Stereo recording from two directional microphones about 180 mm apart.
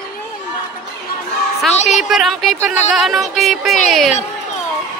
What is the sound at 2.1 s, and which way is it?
Speech, centre (ahead or behind).